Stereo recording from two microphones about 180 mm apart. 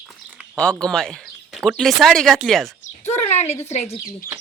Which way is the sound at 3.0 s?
40° left (ahead or behind).